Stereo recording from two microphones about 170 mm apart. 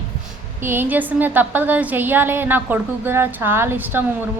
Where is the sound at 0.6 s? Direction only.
10° right (ahead or behind).